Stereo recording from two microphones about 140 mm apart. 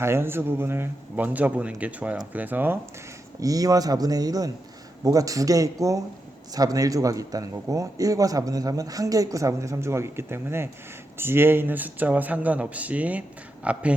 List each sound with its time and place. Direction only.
0.0 s a man's voice: 15° right (ahead or behind)
3.4 s a man's voice: 25° right (ahead or behind); by 13.8 s 10° right (ahead or behind)